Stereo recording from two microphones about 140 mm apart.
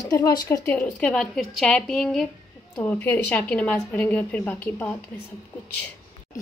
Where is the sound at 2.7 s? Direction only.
15° left (ahead or behind).